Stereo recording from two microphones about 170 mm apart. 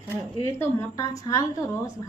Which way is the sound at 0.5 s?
20° left (ahead or behind).